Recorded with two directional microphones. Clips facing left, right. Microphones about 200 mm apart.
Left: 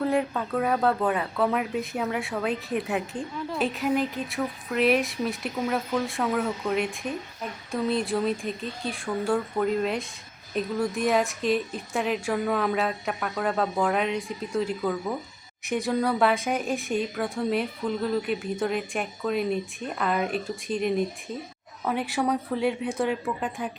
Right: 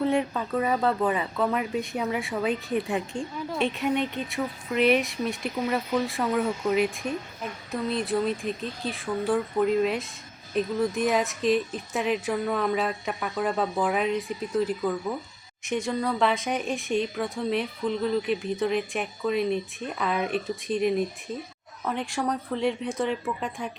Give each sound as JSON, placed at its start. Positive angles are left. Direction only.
{"t": 0.0, "sound": "speech", "side_deg": 0}